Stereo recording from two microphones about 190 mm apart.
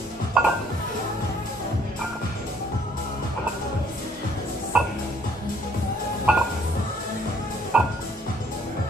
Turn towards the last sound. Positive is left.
turn(degrees=-5)  # may be behind; listen again after turning